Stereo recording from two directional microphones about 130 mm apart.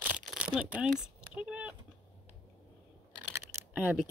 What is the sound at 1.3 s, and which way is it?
Vehicle, 10° right (ahead or behind).